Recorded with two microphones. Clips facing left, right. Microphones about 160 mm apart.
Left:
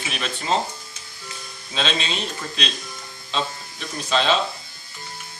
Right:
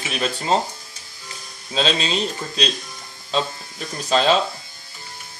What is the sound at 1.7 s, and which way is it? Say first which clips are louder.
Speech: right 4 dB; 35° right (ahead or behind).